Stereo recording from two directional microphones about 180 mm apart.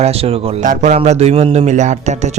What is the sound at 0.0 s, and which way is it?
A man's voice, 35° right (ahead or behind).